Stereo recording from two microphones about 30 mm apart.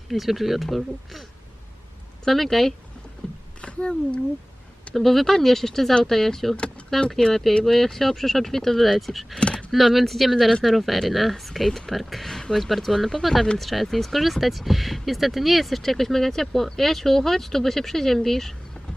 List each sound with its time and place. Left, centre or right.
0.1 s speech: centre
2.2 s speech: centre
3.2 s rowboat: left
3.6 s speech: left
4.9 s speech: centre
9.0 s speech: centre
9.4 s a sound: left
9.7 s speech: centre
12.3 s speech: centre
12.5 s speech: centre